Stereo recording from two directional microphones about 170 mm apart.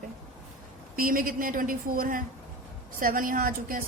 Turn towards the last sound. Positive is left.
turn(degrees=-55)  # may be behind; listen again after turning